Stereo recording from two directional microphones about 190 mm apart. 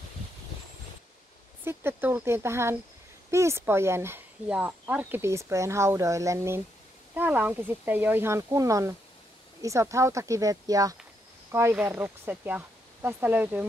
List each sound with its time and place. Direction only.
1.6 s speech: 10° right (ahead or behind)